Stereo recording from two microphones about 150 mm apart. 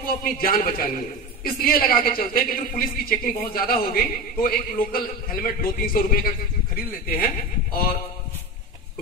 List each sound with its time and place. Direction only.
0.2 s a man's voice: 75° left (ahead or behind)